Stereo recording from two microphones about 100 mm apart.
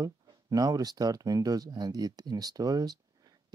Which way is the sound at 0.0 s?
35° right (ahead or behind).